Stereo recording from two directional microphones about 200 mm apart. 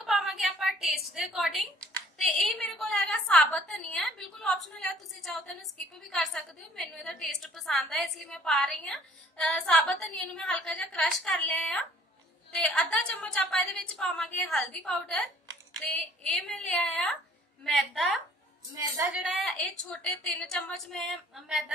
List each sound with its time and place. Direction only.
0.0 s a sound: centre (ahead or behind)
2.1 s a woman's voice: centre (ahead or behind)
18.7 s a woman's voice: 20° right (ahead or behind)
19.2 s a woman's voice: centre (ahead or behind)